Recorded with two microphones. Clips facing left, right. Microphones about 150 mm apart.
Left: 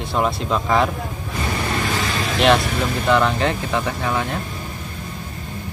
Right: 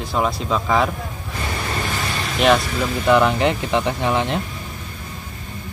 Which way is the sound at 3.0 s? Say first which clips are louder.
Right 3 dB; 15° right (ahead or behind).